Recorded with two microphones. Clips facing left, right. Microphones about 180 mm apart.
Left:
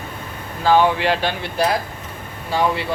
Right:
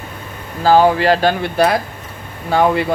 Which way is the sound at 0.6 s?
40° right (ahead or behind).